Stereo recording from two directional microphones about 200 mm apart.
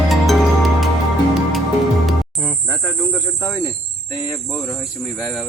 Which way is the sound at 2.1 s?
5° left (ahead or behind).